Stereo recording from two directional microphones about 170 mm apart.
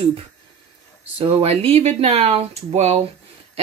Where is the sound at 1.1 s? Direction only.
35° right (ahead or behind).